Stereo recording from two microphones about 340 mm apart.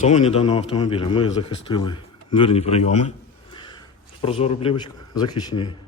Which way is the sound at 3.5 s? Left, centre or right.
Centre.